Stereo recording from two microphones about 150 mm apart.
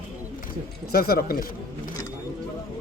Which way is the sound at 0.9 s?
90° left.